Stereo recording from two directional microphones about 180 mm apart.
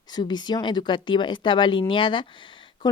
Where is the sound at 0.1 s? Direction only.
25° left (ahead or behind).